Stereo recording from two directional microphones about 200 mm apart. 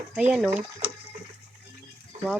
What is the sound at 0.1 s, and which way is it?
Speech, 5° right (ahead or behind).